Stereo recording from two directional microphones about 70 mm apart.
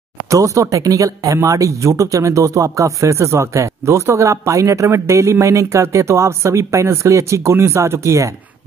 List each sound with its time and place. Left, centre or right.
0.3 s speech: right